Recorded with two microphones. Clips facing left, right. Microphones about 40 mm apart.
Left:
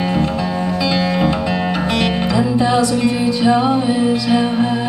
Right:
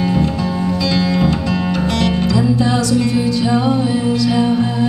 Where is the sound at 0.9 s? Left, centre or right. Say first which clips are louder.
Right 1 dB; left.